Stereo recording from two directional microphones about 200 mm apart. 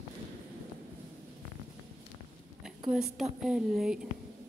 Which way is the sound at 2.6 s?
5° right (ahead or behind).